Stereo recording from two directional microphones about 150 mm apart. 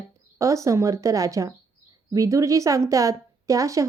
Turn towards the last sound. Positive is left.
turn(degrees=-20)  # may be behind; listen again after turning